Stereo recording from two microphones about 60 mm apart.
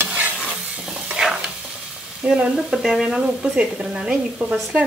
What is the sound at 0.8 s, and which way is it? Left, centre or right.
Stir, centre.